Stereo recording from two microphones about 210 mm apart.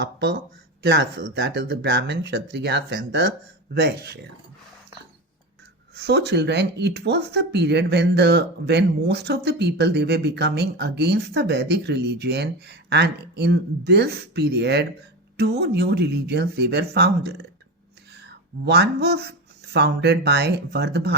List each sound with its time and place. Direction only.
0.0 s speech: 55° right (ahead or behind)
5.9 s speech: 55° right (ahead or behind)